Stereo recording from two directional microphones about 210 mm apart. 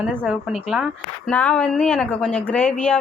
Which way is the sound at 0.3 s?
5° right (ahead or behind).